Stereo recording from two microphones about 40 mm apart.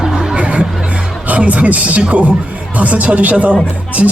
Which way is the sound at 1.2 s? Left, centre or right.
Right.